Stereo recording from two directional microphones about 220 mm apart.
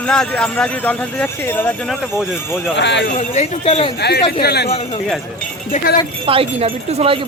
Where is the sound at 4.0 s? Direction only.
50° left (ahead or behind).